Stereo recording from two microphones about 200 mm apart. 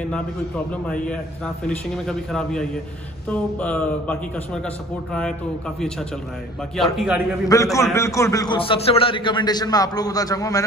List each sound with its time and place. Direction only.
0.8 s a man's voice: 5° left (ahead or behind)
6.8 s a man's voice: centre (ahead or behind)
7.4 s a man's voice: 15° left (ahead or behind)